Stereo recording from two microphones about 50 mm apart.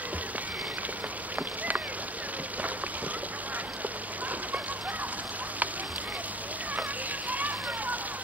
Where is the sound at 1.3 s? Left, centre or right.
Right.